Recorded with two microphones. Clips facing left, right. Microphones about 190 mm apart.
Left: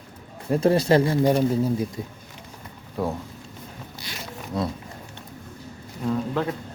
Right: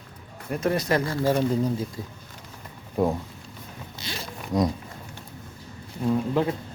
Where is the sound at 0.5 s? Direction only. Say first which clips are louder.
Left 6 dB; 30° left (ahead or behind); by 1.7 s 10° left (ahead or behind).